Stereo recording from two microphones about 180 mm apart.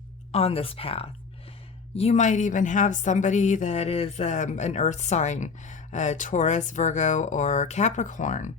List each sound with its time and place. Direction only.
0.3 s speech: 35° left (ahead or behind)